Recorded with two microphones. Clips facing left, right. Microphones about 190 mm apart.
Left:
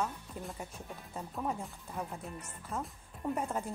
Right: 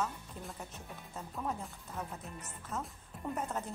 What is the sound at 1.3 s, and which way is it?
Speech, centre (ahead or behind).